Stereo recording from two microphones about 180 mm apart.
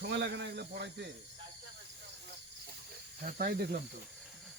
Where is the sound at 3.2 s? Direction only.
50° right (ahead or behind).